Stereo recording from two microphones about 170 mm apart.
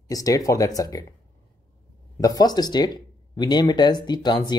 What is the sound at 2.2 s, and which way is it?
Speech, 20° left (ahead or behind).